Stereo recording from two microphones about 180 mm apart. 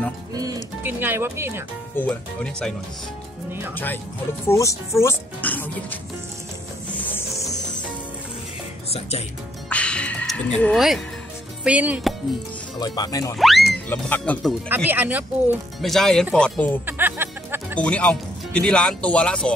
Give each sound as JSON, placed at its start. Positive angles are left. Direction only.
{"t": 0.3, "sound": "music", "side_deg": -20}
{"t": 0.8, "sound": "speech", "side_deg": -10}
{"t": 2.0, "sound": "speech", "side_deg": 5}
{"t": 3.7, "sound": "speech", "side_deg": 10}
{"t": 6.9, "sound": "music", "side_deg": 10}
{"t": 9.7, "sound": "music", "side_deg": 5}
{"t": 11.6, "sound": "speech", "side_deg": -10}
{"t": 12.7, "sound": "speech", "side_deg": 20}
{"t": 13.4, "sound": "speech", "side_deg": 0}
{"t": 14.7, "sound": "speech", "side_deg": -10}
{"t": 15.8, "sound": "speech", "side_deg": 0}
{"t": 16.8, "sound": "music", "side_deg": -10}
{"t": 17.7, "sound": "speech", "side_deg": 5}